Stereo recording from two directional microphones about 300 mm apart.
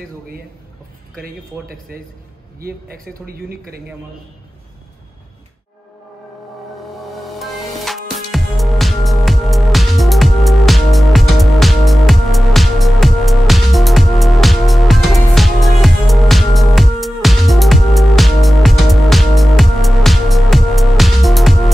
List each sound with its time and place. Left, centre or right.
1.1 s a man's voice: right
7.0 s music: centre